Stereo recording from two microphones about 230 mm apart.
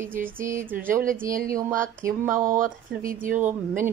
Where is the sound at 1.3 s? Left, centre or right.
Right.